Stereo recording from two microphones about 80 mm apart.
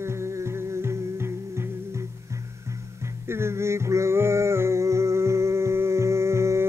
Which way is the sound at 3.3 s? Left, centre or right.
Right.